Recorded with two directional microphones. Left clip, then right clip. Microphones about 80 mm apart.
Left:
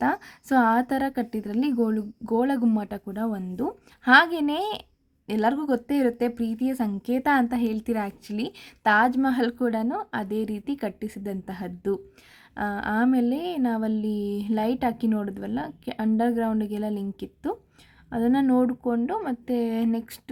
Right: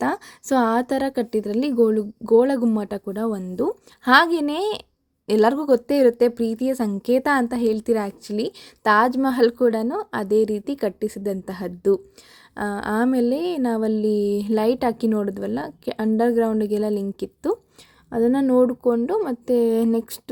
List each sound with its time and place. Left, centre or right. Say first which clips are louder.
0.0 s a woman's voice: right 1 dB; centre
5.2 s a woman's voice: right 7 dB; right
5.5 s a woman's voice: right 7 dB; centre; by 20.3 s right